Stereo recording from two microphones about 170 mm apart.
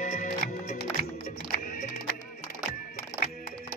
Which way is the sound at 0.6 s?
65° left (ahead or behind).